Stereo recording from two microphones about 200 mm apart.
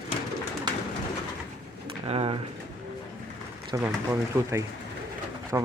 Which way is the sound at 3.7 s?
15° right (ahead or behind).